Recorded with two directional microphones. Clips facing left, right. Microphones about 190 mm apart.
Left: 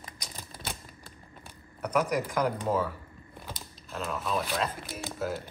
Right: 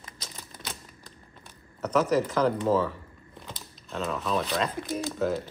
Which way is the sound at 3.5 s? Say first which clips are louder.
Right 2 dB; centre (ahead or behind).